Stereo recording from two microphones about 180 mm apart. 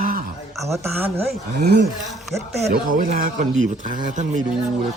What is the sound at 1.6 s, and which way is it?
Speech, 65° right (ahead or behind).